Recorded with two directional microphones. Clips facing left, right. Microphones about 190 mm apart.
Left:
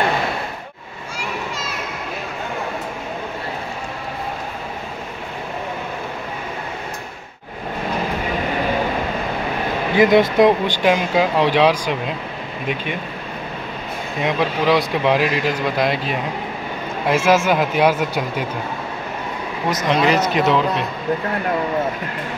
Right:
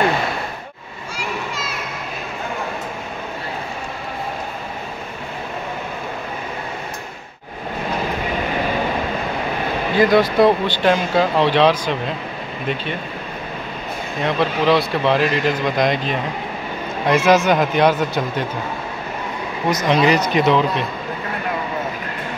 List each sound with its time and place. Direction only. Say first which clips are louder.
9.9 s speech: left 1 dB; 20° left (ahead or behind)
14.2 s speech: right 1 dB; 15° left (ahead or behind)
19.7 s speech: right 1 dB; centre (ahead or behind)